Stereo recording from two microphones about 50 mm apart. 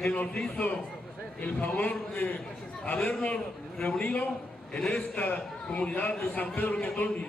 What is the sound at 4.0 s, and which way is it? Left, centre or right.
A man's voice, left.